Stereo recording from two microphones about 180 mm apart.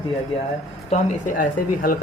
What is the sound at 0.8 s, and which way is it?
Speech, 45° left (ahead or behind).